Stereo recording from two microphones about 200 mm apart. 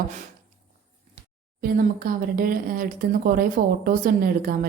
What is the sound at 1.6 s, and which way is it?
Speech, 45° right (ahead or behind).